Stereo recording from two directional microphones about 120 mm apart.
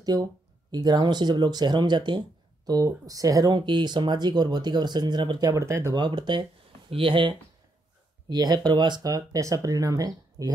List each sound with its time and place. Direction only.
0.0 s speech: 30° right (ahead or behind)
5.5 s speech: 25° right (ahead or behind)
5.9 s speech: 40° right (ahead or behind)